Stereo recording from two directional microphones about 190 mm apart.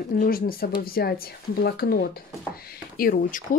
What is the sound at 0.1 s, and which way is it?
Speech, 50° left (ahead or behind).